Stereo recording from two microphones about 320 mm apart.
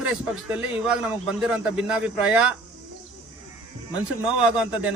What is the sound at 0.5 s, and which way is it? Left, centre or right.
Speech, centre.